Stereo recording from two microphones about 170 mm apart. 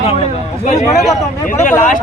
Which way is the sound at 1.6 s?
45° left (ahead or behind).